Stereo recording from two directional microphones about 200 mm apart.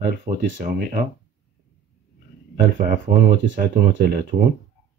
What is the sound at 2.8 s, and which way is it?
Speech, 55° right (ahead or behind).